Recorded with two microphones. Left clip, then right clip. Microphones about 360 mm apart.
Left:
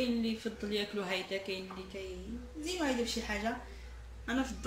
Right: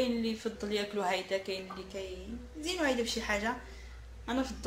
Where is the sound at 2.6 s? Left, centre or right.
Right.